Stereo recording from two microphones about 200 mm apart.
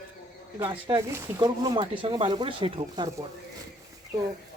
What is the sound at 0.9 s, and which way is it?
Speech, 15° right (ahead or behind).